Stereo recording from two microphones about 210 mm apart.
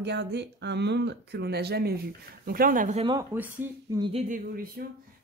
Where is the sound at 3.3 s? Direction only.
10° right (ahead or behind).